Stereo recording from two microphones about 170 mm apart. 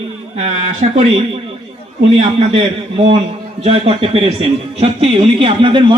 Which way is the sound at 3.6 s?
35° right (ahead or behind).